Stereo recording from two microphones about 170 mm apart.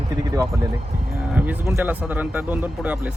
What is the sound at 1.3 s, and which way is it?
Speech, 10° right (ahead or behind).